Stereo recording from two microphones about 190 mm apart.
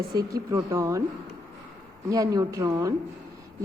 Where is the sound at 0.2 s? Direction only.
20° right (ahead or behind).